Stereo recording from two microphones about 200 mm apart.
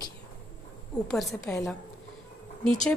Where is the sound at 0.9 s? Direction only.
Centre (ahead or behind).